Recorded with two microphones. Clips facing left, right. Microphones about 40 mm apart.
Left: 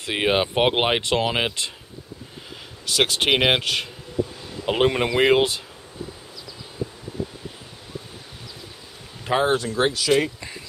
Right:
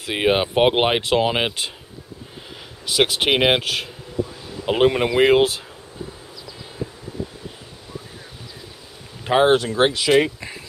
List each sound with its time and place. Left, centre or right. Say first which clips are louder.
0.0 s speech: right 2 dB; centre
2.9 s speech: right 2 dB; centre
9.3 s speech: right 4 dB; centre
9.8 s speech: right 3 dB; right
10.0 s speech: right 4 dB; centre